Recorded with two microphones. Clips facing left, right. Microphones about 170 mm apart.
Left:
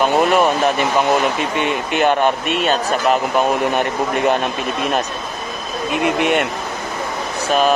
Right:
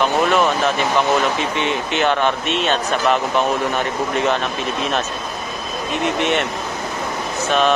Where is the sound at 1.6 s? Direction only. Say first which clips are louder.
Left 3 dB; 50° left (ahead or behind).